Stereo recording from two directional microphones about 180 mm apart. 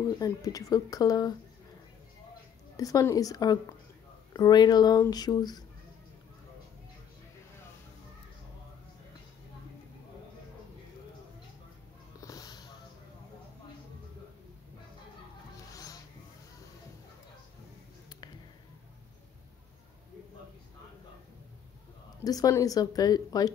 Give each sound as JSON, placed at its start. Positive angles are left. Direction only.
{"t": 0.2, "sound": "speech", "side_deg": 20}
{"t": 2.8, "sound": "speech", "side_deg": 20}
{"t": 12.2, "sound": "a sound", "side_deg": 20}
{"t": 15.7, "sound": "music", "side_deg": 20}
{"t": 22.2, "sound": "speech", "side_deg": 20}